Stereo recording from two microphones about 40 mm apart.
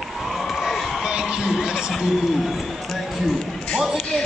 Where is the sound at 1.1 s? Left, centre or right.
Right.